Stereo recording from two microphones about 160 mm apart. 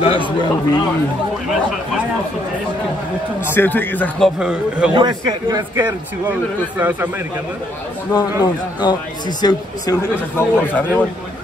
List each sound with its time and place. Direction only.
0.0 s a man's voice: 30° left (ahead or behind)
3.4 s speech: 15° left (ahead or behind)
4.4 s a man's voice: 5° right (ahead or behind)
4.9 s a man's voice: 25° right (ahead or behind)
6.8 s a man's voice: 10° right (ahead or behind)
8.1 s a man's voice: 25° left (ahead or behind)
10.3 s speech: 10° left (ahead or behind)